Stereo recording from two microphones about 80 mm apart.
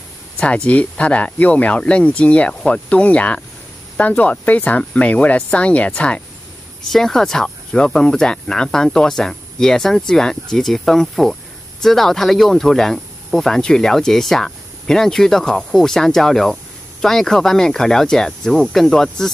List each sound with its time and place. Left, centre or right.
0.4 s speech: centre